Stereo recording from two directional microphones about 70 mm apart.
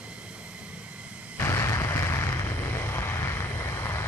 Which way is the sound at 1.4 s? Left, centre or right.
Left.